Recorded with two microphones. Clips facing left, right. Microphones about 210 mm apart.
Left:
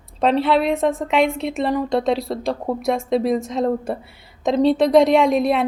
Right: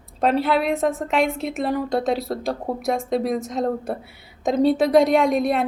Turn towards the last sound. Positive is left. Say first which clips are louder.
# left 2 dB
turn(degrees=0)  # may be behind; listen again after turning